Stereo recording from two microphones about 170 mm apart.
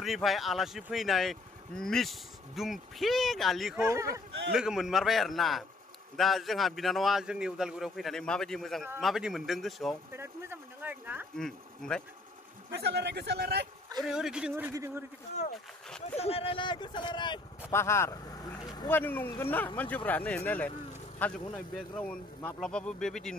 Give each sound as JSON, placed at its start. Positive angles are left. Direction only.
{"t": 0.0, "sound": "speech", "side_deg": 0}
{"t": 3.7, "sound": "speech", "side_deg": -15}
{"t": 4.3, "sound": "speech", "side_deg": -85}
{"t": 4.6, "sound": "speech", "side_deg": -5}
{"t": 10.1, "sound": "speech", "side_deg": -15}
{"t": 11.3, "sound": "speech", "side_deg": 5}
{"t": 12.7, "sound": "a man's voice", "side_deg": -80}
{"t": 14.0, "sound": "speech", "side_deg": -5}
{"t": 16.2, "sound": "speech", "side_deg": 35}
{"t": 17.6, "sound": "speech", "side_deg": 15}
{"t": 18.9, "sound": "speech", "side_deg": 10}